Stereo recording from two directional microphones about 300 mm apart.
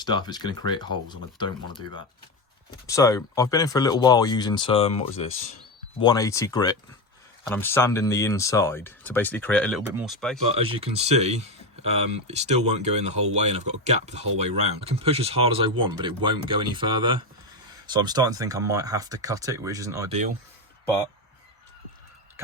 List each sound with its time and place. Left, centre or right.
0.0 s speech: centre
10.5 s speech: centre